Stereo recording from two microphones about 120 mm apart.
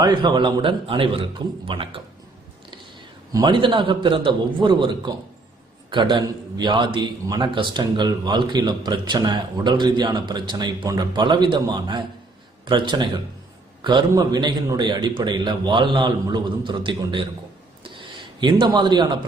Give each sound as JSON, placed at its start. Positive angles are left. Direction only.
{"t": 0.0, "sound": "a man's voice", "side_deg": -40}
{"t": 3.4, "sound": "a man's voice", "side_deg": -45}
{"t": 17.8, "sound": "a sound", "side_deg": -40}